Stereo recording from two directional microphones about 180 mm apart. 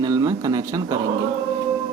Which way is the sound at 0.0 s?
20° right (ahead or behind).